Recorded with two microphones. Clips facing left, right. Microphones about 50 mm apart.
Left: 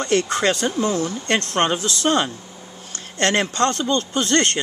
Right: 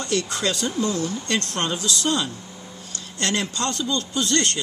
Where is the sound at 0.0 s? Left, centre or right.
Left.